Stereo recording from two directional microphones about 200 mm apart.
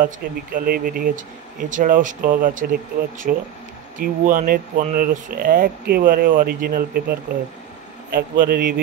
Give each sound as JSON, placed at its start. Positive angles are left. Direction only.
{"t": 0.0, "sound": "speech", "side_deg": -45}